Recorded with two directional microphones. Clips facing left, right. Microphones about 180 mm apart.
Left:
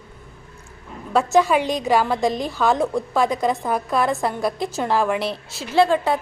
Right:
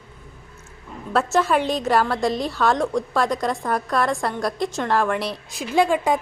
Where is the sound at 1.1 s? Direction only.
Centre (ahead or behind).